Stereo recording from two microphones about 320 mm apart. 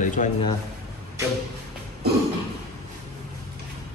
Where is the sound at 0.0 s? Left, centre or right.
Left.